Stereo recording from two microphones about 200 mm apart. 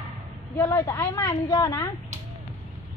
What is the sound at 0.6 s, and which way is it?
A woman's voice, 15° left (ahead or behind).